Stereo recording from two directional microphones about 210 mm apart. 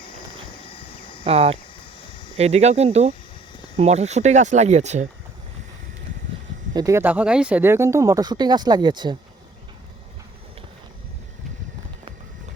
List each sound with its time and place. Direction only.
1.2 s speech: 30° right (ahead or behind)
6.7 s speech: 15° right (ahead or behind)